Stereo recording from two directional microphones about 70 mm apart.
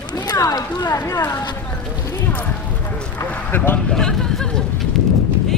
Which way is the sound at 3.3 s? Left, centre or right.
Left.